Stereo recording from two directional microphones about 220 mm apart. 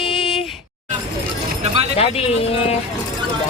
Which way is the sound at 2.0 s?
25° left (ahead or behind).